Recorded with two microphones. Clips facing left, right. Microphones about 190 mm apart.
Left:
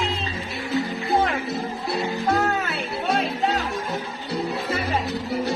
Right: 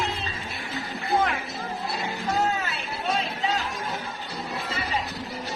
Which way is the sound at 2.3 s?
65° left (ahead or behind).